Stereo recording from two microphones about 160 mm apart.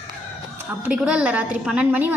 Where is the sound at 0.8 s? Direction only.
5° right (ahead or behind).